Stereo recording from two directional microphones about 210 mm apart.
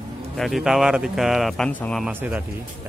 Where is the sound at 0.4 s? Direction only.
Centre (ahead or behind).